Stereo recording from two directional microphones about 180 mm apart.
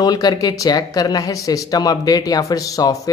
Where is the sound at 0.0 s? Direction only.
20° left (ahead or behind).